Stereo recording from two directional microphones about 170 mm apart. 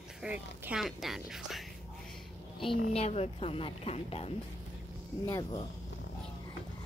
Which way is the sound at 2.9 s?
40° left (ahead or behind).